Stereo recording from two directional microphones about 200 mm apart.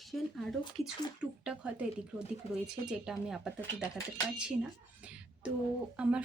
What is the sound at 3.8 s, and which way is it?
Speech, 15° left (ahead or behind).